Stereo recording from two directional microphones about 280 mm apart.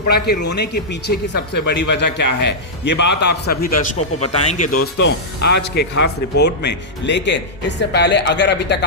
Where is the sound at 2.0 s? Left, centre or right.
Left.